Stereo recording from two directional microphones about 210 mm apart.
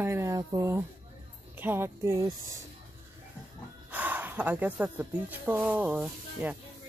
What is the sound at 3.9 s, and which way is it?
Speech, 10° right (ahead or behind).